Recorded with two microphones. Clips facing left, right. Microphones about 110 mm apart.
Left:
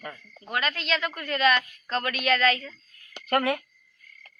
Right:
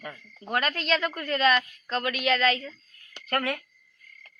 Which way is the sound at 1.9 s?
20° right (ahead or behind).